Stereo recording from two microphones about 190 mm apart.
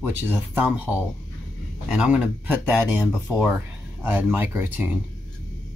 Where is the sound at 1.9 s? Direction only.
5° right (ahead or behind).